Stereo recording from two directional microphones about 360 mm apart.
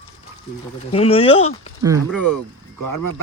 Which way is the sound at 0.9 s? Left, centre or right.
Centre.